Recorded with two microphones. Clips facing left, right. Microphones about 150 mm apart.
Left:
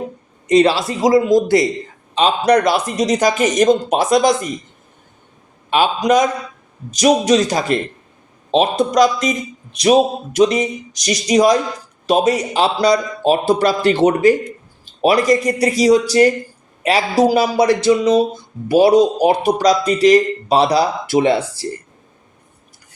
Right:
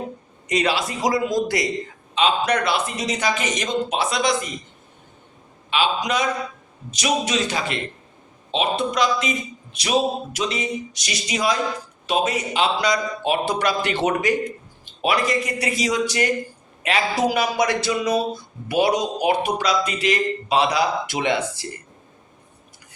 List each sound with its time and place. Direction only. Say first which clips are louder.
0.4 s a man's voice: left 9 dB; 30° left (ahead or behind)
2.1 s speech: left 6 dB; 35° left (ahead or behind)
5.7 s speech: left 8 dB; 45° left (ahead or behind)